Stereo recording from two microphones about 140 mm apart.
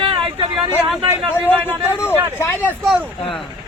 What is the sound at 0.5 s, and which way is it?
Speech, 10° right (ahead or behind).